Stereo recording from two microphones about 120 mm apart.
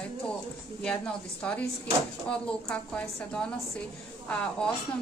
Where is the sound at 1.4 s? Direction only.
10° left (ahead or behind).